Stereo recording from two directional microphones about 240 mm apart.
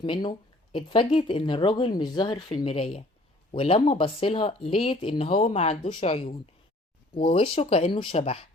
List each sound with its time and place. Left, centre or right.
0.0 s speech: centre